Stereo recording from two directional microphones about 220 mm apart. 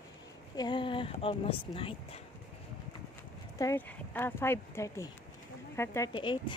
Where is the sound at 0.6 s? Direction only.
20° left (ahead or behind).